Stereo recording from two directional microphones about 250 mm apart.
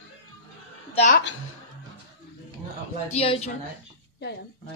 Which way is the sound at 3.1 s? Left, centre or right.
Left.